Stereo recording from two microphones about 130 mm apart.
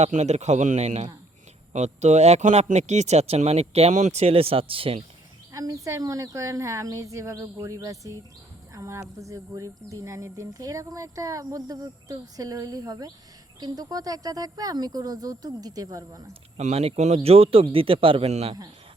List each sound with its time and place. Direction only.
0.0 s speech: 55° right (ahead or behind)
5.5 s speech: 25° right (ahead or behind)
16.6 s a man's voice: 55° right (ahead or behind)